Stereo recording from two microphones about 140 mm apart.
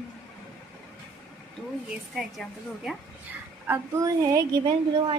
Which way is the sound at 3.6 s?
20° right (ahead or behind).